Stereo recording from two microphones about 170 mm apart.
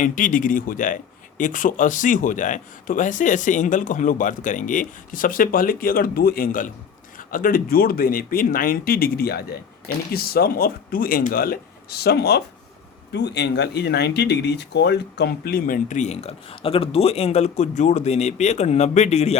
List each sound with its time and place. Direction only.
0.0 s speech: 50° left (ahead or behind); by 12.4 s 75° left (ahead or behind)
13.1 s speech: 85° left; by 19.4 s 40° left (ahead or behind)